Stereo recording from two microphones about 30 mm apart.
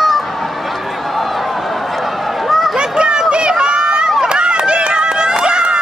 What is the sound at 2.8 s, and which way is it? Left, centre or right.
Run, right.